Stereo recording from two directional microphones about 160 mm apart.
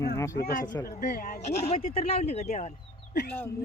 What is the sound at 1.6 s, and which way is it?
Speech, 35° left (ahead or behind).